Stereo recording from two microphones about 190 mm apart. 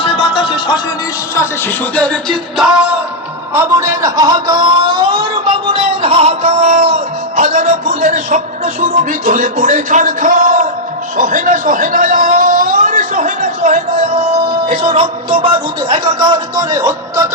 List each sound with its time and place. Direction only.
0.0 s music: 30° left (ahead or behind)
1.4 s music: 10° left (ahead or behind)
3.5 s speech: 15° right (ahead or behind)